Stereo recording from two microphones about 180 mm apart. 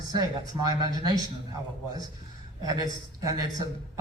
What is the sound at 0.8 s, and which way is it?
Speech, 20° right (ahead or behind).